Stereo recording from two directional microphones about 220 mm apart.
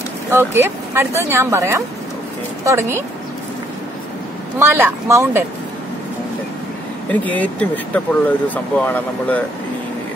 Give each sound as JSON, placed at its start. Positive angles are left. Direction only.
{"t": 0.3, "sound": "speech", "side_deg": -10}
{"t": 4.6, "sound": "speech", "side_deg": -10}
{"t": 7.1, "sound": "speech", "side_deg": 5}